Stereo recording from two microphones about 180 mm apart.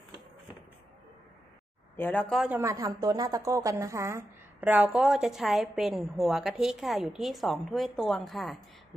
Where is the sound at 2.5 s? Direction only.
15° right (ahead or behind).